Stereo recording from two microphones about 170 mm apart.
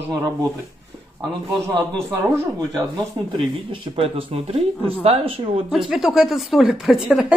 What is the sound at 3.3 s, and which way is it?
Speech, 30° right (ahead or behind).